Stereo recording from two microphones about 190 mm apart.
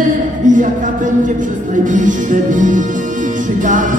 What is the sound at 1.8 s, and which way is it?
Music, 45° right (ahead or behind).